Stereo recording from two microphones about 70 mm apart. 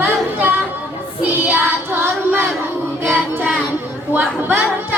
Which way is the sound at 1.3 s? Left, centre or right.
Right.